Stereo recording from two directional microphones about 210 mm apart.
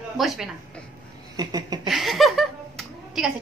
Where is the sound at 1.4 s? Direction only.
20° right (ahead or behind).